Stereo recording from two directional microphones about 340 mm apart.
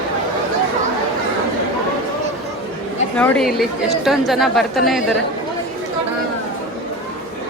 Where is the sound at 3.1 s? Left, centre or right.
Centre.